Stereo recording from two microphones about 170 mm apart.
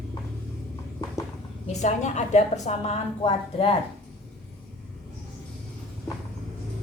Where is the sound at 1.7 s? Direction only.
40° left (ahead or behind).